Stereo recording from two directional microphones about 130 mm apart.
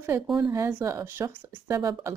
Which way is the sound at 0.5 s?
20° right (ahead or behind).